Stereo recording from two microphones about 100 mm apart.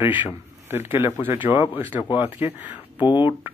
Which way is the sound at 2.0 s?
50° left (ahead or behind).